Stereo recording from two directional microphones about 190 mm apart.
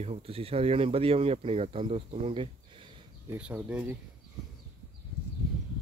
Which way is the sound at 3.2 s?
10° right (ahead or behind).